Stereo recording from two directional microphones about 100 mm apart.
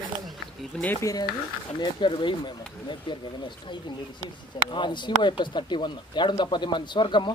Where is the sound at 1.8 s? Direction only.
55° left (ahead or behind).